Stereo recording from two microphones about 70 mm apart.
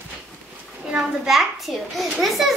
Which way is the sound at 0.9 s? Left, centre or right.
Centre.